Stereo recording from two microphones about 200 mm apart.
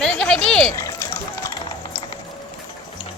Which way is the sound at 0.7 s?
15° left (ahead or behind).